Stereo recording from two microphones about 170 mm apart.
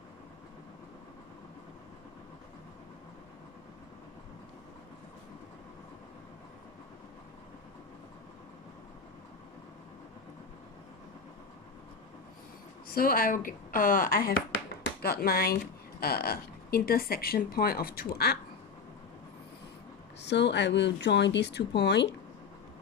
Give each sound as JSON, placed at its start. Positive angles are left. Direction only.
{"t": 12.9, "sound": "speech", "side_deg": 60}
{"t": 20.2, "sound": "speech", "side_deg": 90}